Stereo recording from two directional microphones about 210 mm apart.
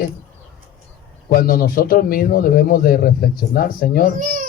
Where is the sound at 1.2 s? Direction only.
45° left (ahead or behind).